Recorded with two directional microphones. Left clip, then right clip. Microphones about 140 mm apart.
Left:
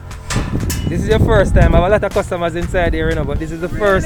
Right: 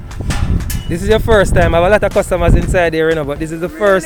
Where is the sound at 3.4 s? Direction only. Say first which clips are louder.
Even; 40° right (ahead or behind).